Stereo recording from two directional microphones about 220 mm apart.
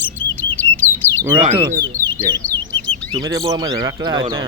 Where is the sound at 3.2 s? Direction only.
15° right (ahead or behind).